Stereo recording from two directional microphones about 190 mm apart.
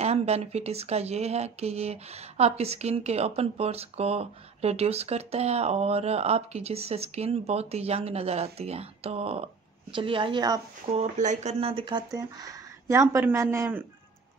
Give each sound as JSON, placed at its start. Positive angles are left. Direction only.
{"t": 0.0, "sound": "speech", "side_deg": -35}
{"t": 10.9, "sound": "speech", "side_deg": -35}